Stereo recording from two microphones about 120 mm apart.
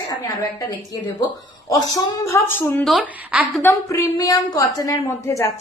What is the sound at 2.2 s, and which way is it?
Speech, 20° left (ahead or behind).